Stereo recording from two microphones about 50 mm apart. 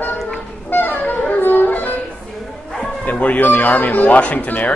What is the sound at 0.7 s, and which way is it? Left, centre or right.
Music, left.